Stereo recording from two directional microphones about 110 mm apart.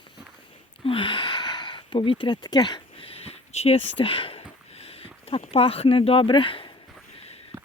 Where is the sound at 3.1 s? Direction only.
70° left (ahead or behind); by 6.7 s 50° left (ahead or behind).